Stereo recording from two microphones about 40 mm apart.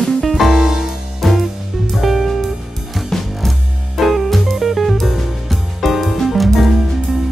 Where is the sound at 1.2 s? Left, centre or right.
Centre.